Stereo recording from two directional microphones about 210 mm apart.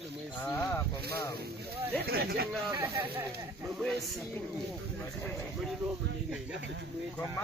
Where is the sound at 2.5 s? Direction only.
5° right (ahead or behind).